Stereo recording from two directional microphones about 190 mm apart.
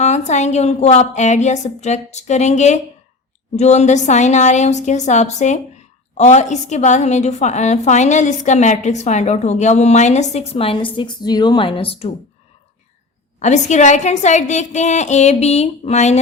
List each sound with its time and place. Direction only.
0.0 s a woman's voice: 35° left (ahead or behind)
13.4 s a woman's voice: 40° left (ahead or behind)